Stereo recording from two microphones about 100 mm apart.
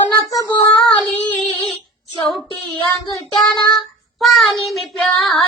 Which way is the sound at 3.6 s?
45° left (ahead or behind).